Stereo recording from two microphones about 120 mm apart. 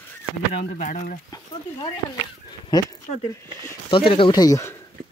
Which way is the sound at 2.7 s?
35° left (ahead or behind).